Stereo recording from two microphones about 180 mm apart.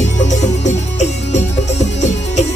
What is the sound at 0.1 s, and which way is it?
Music, 40° left (ahead or behind).